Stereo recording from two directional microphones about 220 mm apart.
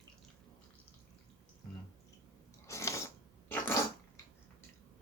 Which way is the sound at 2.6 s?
15° left (ahead or behind).